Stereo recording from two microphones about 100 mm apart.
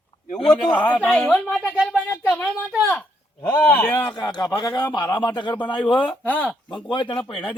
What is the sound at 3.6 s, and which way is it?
Speech, 15° left (ahead or behind).